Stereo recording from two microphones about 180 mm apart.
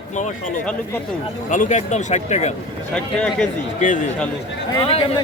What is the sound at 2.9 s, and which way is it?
Speech, 5° left (ahead or behind).